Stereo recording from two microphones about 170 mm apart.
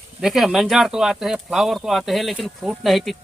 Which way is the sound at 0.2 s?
Centre (ahead or behind).